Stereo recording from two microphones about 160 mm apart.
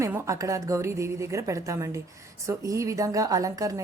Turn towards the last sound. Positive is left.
turn(degrees=-20)  # may be behind; listen again after turning